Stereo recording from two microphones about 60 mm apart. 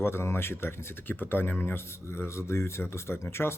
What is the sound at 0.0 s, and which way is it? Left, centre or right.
Speech, left.